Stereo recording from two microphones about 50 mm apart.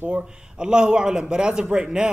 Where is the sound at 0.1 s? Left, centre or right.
Centre.